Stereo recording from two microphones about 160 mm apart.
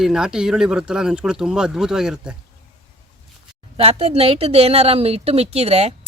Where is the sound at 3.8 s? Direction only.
40° right (ahead or behind).